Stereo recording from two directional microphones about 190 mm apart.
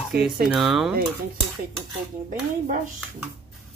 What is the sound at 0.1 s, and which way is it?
Speech, 55° right (ahead or behind).